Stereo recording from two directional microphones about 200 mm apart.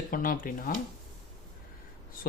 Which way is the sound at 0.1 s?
45° left (ahead or behind).